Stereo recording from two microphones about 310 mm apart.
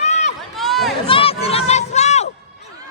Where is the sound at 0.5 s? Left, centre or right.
Centre.